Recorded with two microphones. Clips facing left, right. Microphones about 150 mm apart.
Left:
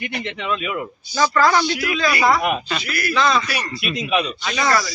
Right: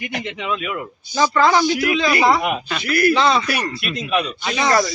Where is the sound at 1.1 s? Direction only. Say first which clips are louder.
Right 1 dB; 20° right (ahead or behind).